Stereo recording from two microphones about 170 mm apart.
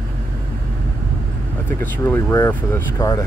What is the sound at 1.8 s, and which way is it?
Speech, 15° left (ahead or behind).